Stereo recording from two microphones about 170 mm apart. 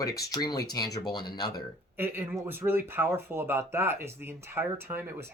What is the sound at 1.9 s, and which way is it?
Speech, 10° right (ahead or behind).